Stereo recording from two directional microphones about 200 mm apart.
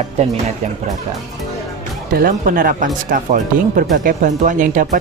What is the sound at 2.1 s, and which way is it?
Speech, 45° right (ahead or behind).